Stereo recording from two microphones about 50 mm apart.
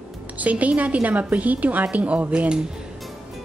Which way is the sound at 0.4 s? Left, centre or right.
Right.